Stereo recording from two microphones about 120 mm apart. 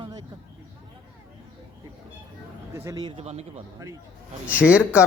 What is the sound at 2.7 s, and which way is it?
Speech, 25° right (ahead or behind).